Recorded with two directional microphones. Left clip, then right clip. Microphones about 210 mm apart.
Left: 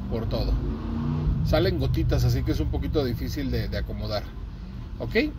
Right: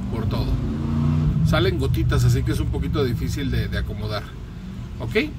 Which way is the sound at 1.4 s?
5° left (ahead or behind).